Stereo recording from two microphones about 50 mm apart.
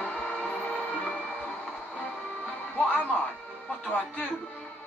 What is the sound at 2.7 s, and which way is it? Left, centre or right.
Speech, left.